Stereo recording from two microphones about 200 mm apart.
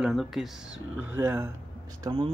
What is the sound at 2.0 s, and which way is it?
Speech, 25° right (ahead or behind).